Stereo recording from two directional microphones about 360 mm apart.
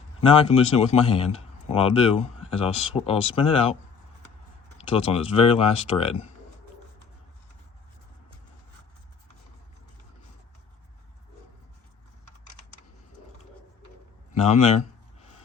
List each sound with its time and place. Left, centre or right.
0.2 s a man's voice: centre
4.8 s a man's voice: centre
14.3 s a man's voice: centre